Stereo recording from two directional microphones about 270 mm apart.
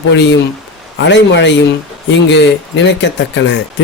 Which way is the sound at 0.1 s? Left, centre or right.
Left.